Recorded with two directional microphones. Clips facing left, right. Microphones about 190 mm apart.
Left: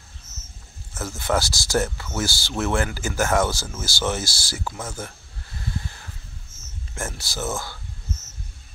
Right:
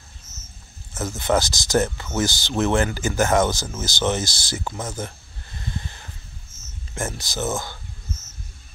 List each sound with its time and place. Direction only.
0.9 s speech: 20° right (ahead or behind)
5.7 s a sound: 5° left (ahead or behind)
7.0 s speech: 20° right (ahead or behind)